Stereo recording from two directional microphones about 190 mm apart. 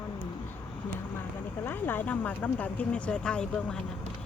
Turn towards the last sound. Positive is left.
turn(degrees=5)  # may be behind; listen again after turning